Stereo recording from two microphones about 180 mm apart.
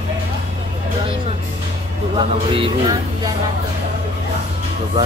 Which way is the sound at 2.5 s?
25° right (ahead or behind).